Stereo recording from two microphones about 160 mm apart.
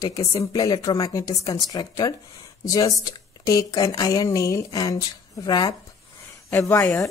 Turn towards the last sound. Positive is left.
turn(degrees=15)  # may be behind; listen again after turning